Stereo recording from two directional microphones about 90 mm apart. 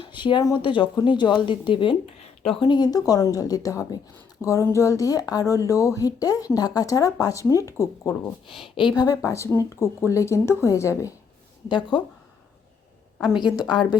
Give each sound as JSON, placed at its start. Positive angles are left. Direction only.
{"t": 0.0, "sound": "speech", "side_deg": 65}
{"t": 1.4, "sound": "speech", "side_deg": 65}
{"t": 2.4, "sound": "speech", "side_deg": 90}
{"t": 2.6, "sound": "speech", "side_deg": 50}
{"t": 8.6, "sound": "speech", "side_deg": 75}
{"t": 9.0, "sound": "speech", "side_deg": 40}
{"t": 11.7, "sound": "speech", "side_deg": 60}
{"t": 13.2, "sound": "a woman's voice", "side_deg": -5}